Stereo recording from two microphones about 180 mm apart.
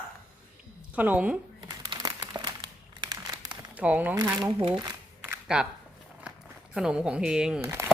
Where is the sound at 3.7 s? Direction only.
10° right (ahead or behind).